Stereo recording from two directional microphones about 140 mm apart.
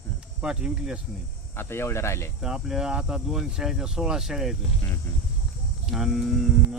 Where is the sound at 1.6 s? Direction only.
15° left (ahead or behind).